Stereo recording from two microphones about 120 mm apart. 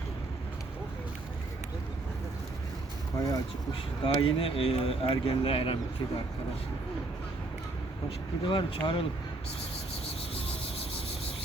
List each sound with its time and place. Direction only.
3.2 s speech: 30° left (ahead or behind)
4.0 s speech: 50° left (ahead or behind)
8.4 s speech: 45° left (ahead or behind)
10.1 s a sound: 50° left (ahead or behind)